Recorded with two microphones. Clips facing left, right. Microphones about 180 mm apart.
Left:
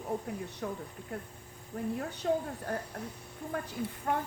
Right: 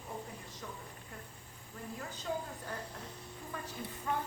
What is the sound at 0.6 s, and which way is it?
Speech, 60° left (ahead or behind).